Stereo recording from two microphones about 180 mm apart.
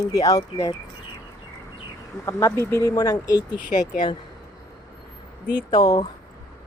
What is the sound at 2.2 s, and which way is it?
Speech, 15° left (ahead or behind).